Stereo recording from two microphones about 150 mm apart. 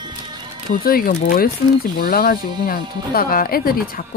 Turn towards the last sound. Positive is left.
turn(degrees=80)